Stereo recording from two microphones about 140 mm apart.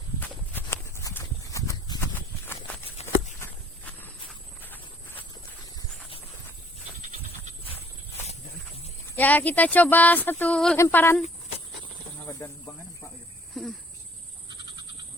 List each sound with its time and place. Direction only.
0.2 s horse: 15° left (ahead or behind)
3.0 s a sound: 50° left (ahead or behind)
4.0 s horse: 15° left (ahead or behind)
9.1 s speech: 10° left (ahead or behind)
12.7 s a sound: 25° left (ahead or behind)
13.5 s speech: centre (ahead or behind)